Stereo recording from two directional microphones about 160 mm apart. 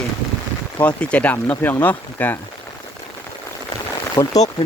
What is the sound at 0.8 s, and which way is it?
Speech, 10° left (ahead or behind).